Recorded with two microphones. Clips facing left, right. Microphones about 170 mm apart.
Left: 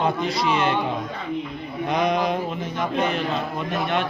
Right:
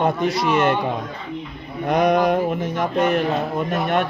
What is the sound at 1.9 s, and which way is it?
Mantra, 45° right (ahead or behind).